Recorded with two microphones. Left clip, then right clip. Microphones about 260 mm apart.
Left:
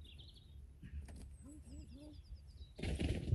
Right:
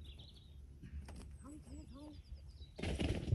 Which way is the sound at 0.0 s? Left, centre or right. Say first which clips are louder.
Right 1 dB; centre.